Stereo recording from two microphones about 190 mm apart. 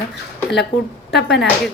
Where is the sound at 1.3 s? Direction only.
Centre (ahead or behind).